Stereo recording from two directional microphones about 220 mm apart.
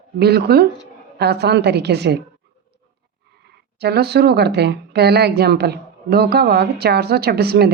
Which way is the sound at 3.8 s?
45° right (ahead or behind).